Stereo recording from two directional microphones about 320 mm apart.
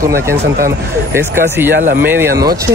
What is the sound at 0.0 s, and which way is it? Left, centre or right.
Speech, centre.